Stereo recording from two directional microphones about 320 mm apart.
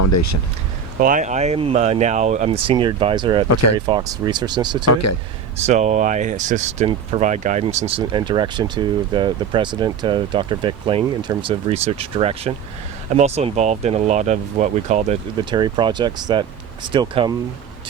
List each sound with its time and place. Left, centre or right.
0.0 s speech: left
0.9 s speech: right
3.5 s speech: left
3.8 s speech: centre
4.9 s speech: left
5.5 s speech: right